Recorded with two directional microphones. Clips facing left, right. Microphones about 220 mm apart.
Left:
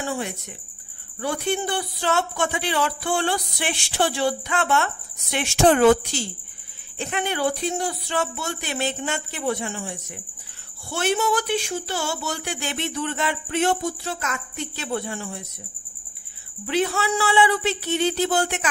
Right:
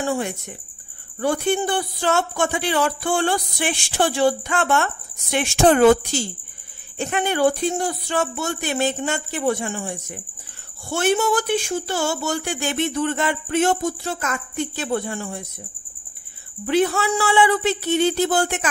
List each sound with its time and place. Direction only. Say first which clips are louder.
1.2 s speech: right 4 dB; 50° right (ahead or behind)
16.6 s speech: right 4 dB; 50° right (ahead or behind)